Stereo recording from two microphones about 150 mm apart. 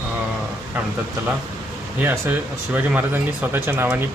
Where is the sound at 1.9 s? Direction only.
15° right (ahead or behind).